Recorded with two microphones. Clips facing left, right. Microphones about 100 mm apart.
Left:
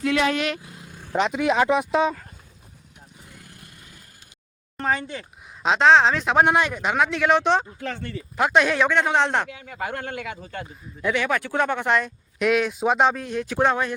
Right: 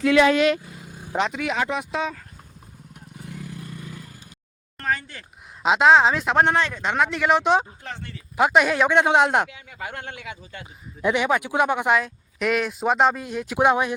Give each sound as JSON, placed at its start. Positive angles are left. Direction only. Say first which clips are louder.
{"t": 0.6, "sound": "vehicle", "louder": "right 2 dB", "side_deg": -10}
{"t": 1.3, "sound": "speech", "louder": "left 5 dB", "side_deg": 25}
{"t": 1.5, "sound": "speech", "louder": "left 6 dB", "side_deg": 55}
{"t": 4.8, "sound": "speech", "louder": "left 2 dB", "side_deg": 20}
{"t": 5.6, "sound": "speech", "louder": "even", "side_deg": -5}
{"t": 8.9, "sound": "speech", "louder": "right 3 dB", "side_deg": -15}
{"t": 9.5, "sound": "speech", "louder": "left 5 dB", "side_deg": 45}
{"t": 11.0, "sound": "speech", "louder": "right 2 dB", "side_deg": -20}
{"t": 11.9, "sound": "speech", "louder": "even", "side_deg": 0}
{"t": 13.7, "sound": "speech", "louder": "right 5 dB", "side_deg": -15}